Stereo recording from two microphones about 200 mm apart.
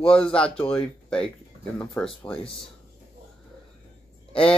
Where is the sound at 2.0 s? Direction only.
10° left (ahead or behind).